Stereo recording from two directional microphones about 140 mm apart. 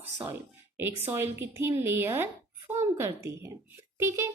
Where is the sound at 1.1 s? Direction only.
20° right (ahead or behind).